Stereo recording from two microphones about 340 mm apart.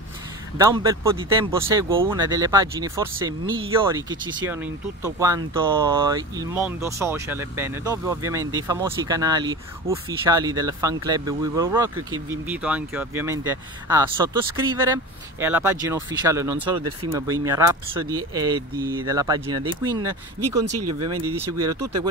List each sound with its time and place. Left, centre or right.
0.6 s speech: centre
20.7 s speech: right
21.1 s speech: centre